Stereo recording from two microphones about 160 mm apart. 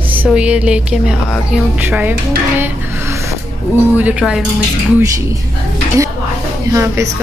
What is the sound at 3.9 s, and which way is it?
Speech, 10° right (ahead or behind).